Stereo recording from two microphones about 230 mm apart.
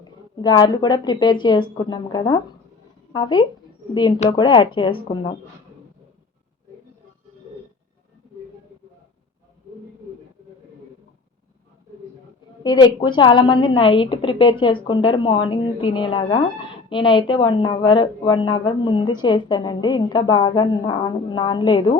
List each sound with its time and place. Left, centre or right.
0.0 s a woman's voice: centre
12.6 s a woman's voice: centre